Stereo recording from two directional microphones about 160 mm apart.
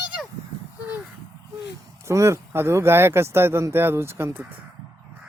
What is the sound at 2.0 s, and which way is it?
Speech, 15° right (ahead or behind).